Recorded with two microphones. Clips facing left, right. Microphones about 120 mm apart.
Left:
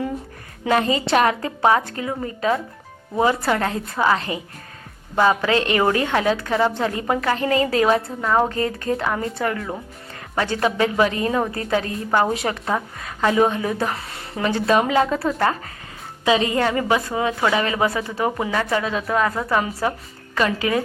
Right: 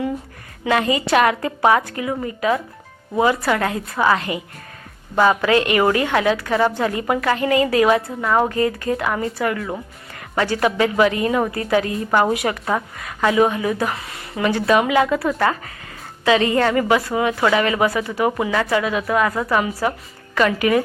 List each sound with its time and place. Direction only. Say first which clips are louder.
0.6 s a woman's voice: even; 30° left (ahead or behind)
5.4 s a woman's voice: right 3 dB; 30° left (ahead or behind)